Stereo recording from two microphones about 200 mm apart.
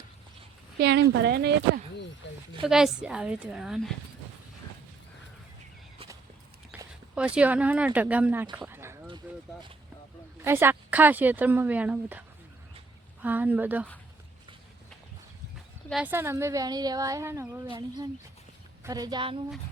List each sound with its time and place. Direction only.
0.8 s speech: 55° right (ahead or behind)
2.2 s speech: 60° left (ahead or behind)
2.6 s a woman's voice: centre (ahead or behind)
6.7 s a sound: 10° right (ahead or behind)
7.2 s a woman's voice: 5° right (ahead or behind)
8.5 s a sound: 10° right (ahead or behind)
9.2 s a woman's voice: 10° right (ahead or behind)
10.4 s a woman's voice: 10° right (ahead or behind)
13.2 s a woman's voice: 10° right (ahead or behind)
15.9 s a woman's voice: 5° right (ahead or behind); by 19.4 s 25° right (ahead or behind)